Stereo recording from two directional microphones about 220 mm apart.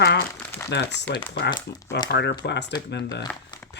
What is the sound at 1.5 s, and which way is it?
Speech, 20° left (ahead or behind).